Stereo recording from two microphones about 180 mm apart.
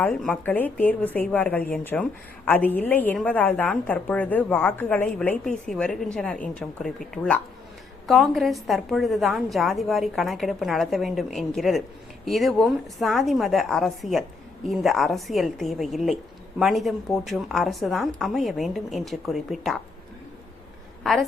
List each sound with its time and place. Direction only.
0.0 s a woman's voice: 5° left (ahead or behind)
21.0 s a woman's voice: centre (ahead or behind)